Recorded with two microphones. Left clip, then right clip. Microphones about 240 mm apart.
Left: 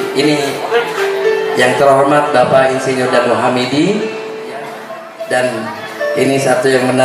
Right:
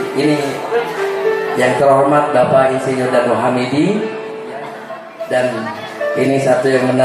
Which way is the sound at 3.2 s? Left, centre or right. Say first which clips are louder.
Left 2 dB; right.